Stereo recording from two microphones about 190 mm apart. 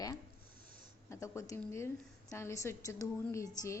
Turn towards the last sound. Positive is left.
turn(degrees=15)  # may be behind; listen again after turning